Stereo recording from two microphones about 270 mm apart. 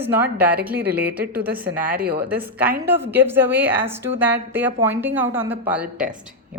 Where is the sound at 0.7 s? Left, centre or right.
Right.